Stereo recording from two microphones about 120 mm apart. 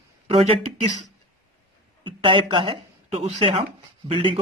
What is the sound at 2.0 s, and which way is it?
Speech, 45° right (ahead or behind).